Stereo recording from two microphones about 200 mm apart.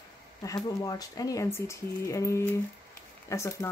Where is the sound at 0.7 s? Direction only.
15° left (ahead or behind).